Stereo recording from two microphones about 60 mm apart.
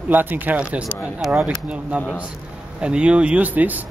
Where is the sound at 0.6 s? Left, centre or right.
Right.